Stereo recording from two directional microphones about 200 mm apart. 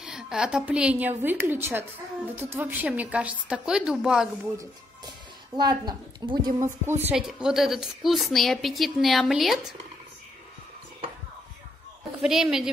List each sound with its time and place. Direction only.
0.0 s a woman's voice: 5° right (ahead or behind)
5.6 s a woman's voice: 20° right (ahead or behind); by 9.8 s centre (ahead or behind)
12.2 s a woman's voice: centre (ahead or behind)